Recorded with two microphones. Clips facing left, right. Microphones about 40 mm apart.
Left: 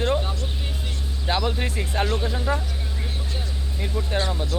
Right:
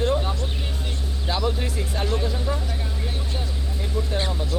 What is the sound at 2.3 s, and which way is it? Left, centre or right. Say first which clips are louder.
Speech: left 2 dB; left.